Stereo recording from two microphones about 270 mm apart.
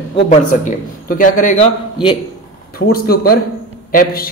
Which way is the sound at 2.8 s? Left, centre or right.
Left.